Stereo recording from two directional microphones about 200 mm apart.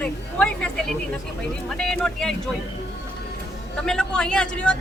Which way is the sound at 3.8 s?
5° left (ahead or behind).